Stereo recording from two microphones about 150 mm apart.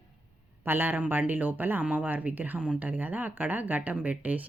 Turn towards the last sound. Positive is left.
turn(degrees=-10)  # may be behind; listen again after turning